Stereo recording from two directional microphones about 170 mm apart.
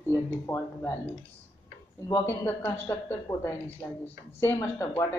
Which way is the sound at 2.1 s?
10° left (ahead or behind).